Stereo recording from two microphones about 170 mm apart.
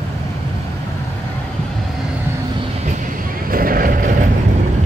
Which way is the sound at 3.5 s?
55° right (ahead or behind).